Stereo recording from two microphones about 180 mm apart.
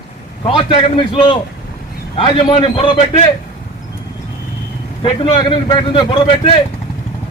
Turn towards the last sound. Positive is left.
turn(degrees=30)  # may be behind; listen again after turning